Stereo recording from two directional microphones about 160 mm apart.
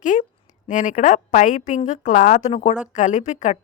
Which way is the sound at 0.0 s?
50° left (ahead or behind).